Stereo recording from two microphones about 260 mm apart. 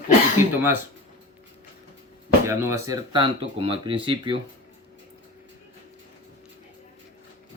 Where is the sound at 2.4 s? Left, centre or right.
Centre.